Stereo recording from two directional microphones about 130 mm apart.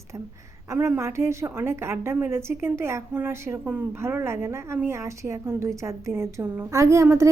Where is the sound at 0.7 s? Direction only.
20° right (ahead or behind).